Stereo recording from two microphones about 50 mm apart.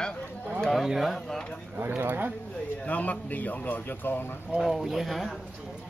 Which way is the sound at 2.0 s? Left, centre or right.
Right.